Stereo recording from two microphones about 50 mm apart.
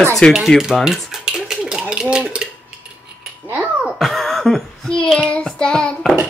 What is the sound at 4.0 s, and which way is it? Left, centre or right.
Throat clearing, centre.